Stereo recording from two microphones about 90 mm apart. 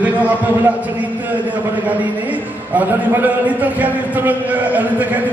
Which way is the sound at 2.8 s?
20° right (ahead or behind).